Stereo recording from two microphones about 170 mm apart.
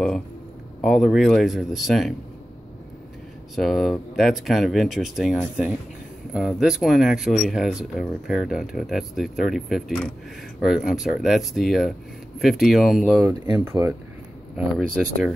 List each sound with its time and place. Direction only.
0.7 s speech: centre (ahead or behind)
3.5 s speech: centre (ahead or behind)
13.2 s speech: 15° right (ahead or behind)
15.0 s speech: 5° right (ahead or behind)